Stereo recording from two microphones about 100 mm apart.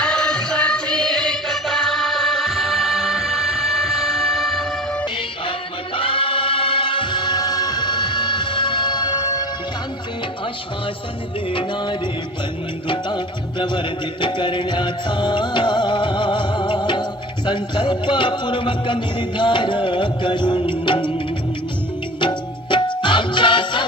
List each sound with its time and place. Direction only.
0.0 s music: 10° left (ahead or behind)
6.0 s music: 60° left (ahead or behind); by 9.5 s 40° left (ahead or behind)
11.5 s music: 50° left (ahead or behind)
22.2 s music: 55° left (ahead or behind)